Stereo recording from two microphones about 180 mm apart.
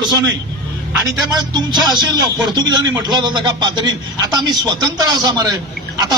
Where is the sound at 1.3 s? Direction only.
25° right (ahead or behind).